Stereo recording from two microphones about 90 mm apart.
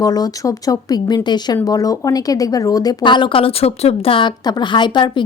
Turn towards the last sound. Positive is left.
turn(degrees=60)  # may be behind; listen again after turning